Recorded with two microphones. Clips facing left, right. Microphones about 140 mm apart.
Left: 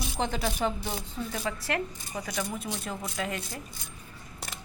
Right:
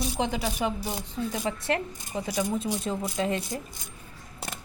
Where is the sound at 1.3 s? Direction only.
25° right (ahead or behind).